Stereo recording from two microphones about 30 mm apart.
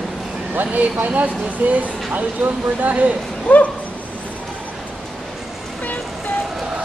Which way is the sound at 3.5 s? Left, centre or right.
Left.